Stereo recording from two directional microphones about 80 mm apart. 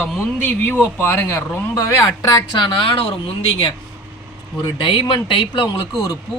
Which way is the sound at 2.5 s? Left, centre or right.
Left.